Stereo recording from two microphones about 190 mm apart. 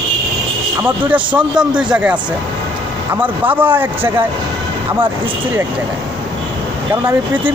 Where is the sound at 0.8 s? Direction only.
5° right (ahead or behind).